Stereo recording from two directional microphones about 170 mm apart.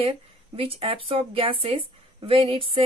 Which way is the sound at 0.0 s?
35° right (ahead or behind).